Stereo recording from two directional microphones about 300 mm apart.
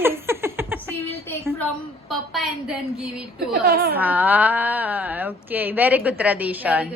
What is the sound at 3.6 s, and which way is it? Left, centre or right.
Speech, right.